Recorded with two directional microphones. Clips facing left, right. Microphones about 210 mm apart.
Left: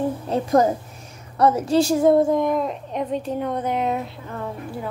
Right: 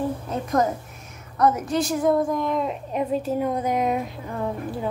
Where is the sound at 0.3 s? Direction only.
30° left (ahead or behind).